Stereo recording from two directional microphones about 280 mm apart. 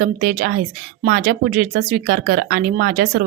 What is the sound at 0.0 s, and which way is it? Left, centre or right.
A woman's voice, right.